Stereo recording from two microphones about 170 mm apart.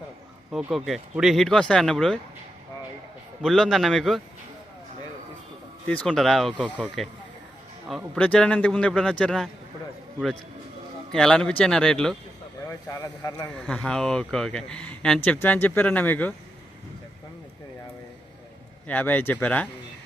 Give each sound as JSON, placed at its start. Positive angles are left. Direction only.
{"t": 0.5, "sound": "speech", "side_deg": 0}
{"t": 3.4, "sound": "speech", "side_deg": 0}
{"t": 5.9, "sound": "speech", "side_deg": 5}
{"t": 7.9, "sound": "speech", "side_deg": 0}
{"t": 11.1, "sound": "speech", "side_deg": 5}
{"t": 12.6, "sound": "speech", "side_deg": 20}
{"t": 13.5, "sound": "speech", "side_deg": 5}
{"t": 18.9, "sound": "speech", "side_deg": 10}